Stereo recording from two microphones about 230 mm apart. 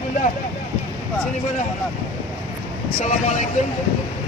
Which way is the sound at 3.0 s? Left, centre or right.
Left.